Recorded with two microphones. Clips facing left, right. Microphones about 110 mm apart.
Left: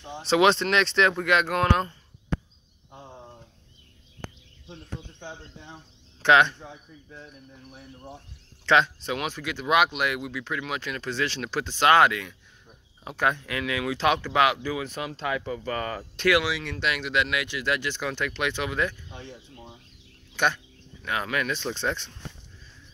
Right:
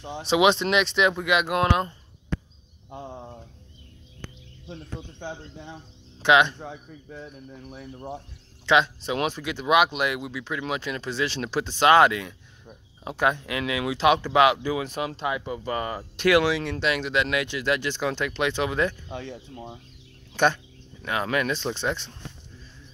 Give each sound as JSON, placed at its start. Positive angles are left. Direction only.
{"t": 0.3, "sound": "speech", "side_deg": -5}
{"t": 6.2, "sound": "speech", "side_deg": -15}
{"t": 6.6, "sound": "speech", "side_deg": -60}
{"t": 8.6, "sound": "speech", "side_deg": -15}
{"t": 9.1, "sound": "speech", "side_deg": -25}
{"t": 16.3, "sound": "speech", "side_deg": -30}
{"t": 19.0, "sound": "speech", "side_deg": -90}
{"t": 21.0, "sound": "speech", "side_deg": -25}